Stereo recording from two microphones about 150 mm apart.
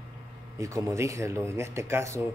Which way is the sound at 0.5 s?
20° right (ahead or behind).